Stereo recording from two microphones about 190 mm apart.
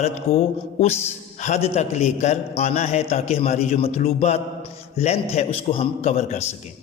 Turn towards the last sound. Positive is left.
turn(degrees=35)  # may be behind; listen again after turning